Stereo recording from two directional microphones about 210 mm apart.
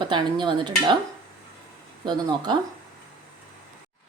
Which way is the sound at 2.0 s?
20° right (ahead or behind).